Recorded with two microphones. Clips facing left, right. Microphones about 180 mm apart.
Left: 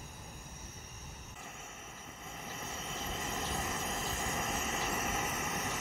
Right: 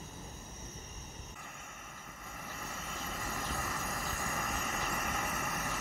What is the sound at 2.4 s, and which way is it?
Vehicle, 20° left (ahead or behind).